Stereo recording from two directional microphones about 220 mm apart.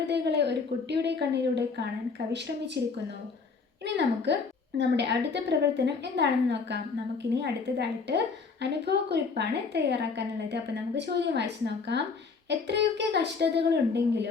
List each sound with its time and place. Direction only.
0.1 s a woman's voice: 50° right (ahead or behind)
3.8 s a woman's voice: 50° right (ahead or behind)